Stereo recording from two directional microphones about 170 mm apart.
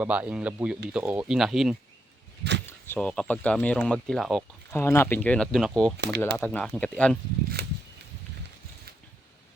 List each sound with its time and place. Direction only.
0.0 s speech: 10° right (ahead or behind)
2.6 s a sound: 15° left (ahead or behind)
3.1 s speech: 5° left (ahead or behind)
4.7 s speech: 15° left (ahead or behind)
6.0 s speech: 80° right
6.3 s speech: 10° left (ahead or behind)
7.6 s a sound: 70° right (ahead or behind)